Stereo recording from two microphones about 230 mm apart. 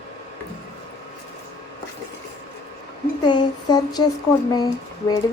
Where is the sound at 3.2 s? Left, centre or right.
Centre.